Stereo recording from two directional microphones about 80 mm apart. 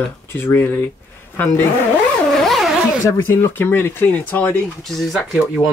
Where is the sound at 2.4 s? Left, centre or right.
Centre.